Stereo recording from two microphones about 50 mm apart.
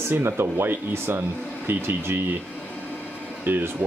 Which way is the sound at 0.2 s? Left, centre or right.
Right.